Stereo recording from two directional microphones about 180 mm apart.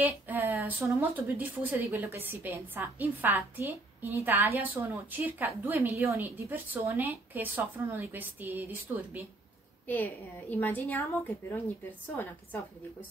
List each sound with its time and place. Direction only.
0.0 s a woman's voice: 10° right (ahead or behind)
9.8 s a woman's voice: 10° left (ahead or behind)